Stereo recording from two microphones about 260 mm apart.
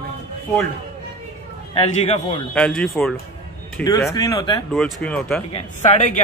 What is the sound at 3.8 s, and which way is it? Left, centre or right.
Speech, centre.